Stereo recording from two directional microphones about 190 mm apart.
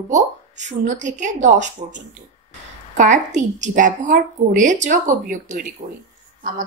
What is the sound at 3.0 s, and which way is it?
A woman's voice, 40° right (ahead or behind).